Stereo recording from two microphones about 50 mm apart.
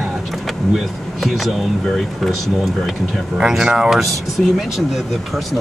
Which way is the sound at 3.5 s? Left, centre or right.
Centre.